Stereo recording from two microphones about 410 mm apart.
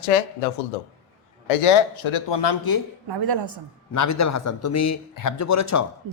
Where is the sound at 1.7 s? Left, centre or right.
Left.